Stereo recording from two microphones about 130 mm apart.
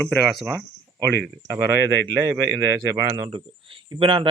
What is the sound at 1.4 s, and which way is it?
A man's voice, 20° right (ahead or behind).